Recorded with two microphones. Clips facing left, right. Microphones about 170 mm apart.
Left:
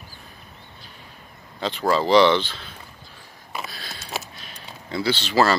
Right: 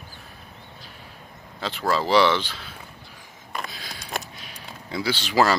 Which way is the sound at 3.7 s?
15° right (ahead or behind).